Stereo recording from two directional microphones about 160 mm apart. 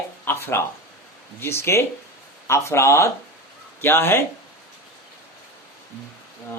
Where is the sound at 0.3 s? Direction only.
15° left (ahead or behind).